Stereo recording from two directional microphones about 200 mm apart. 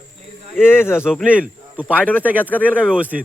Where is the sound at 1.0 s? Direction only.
5° right (ahead or behind).